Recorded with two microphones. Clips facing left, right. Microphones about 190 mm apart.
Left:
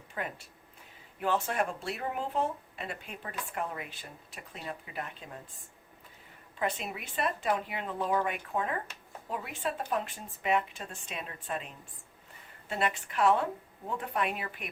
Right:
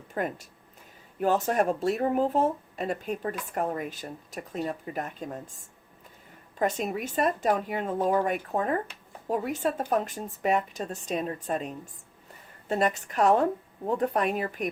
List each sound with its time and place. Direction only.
0.1 s speech: 45° right (ahead or behind)
6.6 s a woman's voice: 45° right (ahead or behind)